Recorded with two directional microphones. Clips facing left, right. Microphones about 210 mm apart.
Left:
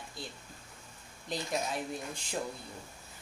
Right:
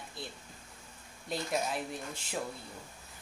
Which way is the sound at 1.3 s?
5° right (ahead or behind).